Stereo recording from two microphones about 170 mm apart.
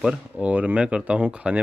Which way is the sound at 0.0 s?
10° right (ahead or behind).